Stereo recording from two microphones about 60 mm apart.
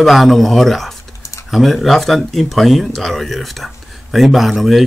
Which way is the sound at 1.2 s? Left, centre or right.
Left.